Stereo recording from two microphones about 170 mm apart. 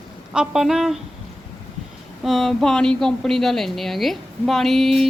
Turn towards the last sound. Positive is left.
turn(degrees=0)  # may be behind; listen again after turning